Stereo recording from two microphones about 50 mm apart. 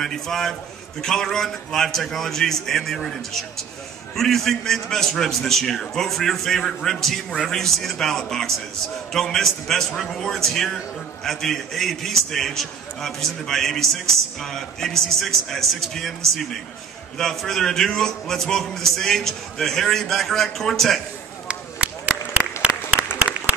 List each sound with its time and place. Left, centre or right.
0.0 s a man's voice: centre
21.5 s a sound: right
22.6 s applause: right